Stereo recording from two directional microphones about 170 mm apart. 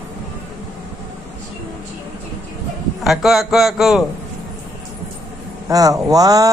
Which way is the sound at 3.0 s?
Centre (ahead or behind).